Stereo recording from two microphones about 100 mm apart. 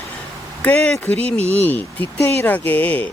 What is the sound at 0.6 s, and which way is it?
Speech, 15° left (ahead or behind).